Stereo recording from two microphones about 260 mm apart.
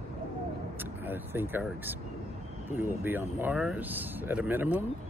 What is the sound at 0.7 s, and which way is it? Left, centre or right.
Speech, centre.